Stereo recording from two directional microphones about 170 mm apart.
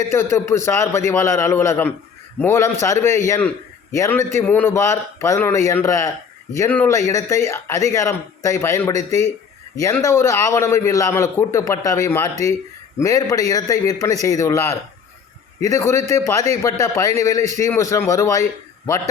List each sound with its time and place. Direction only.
0.1 s a man's voice: 15° left (ahead or behind)